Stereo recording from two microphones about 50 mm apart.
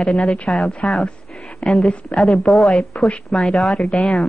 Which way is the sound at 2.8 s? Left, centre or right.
Left.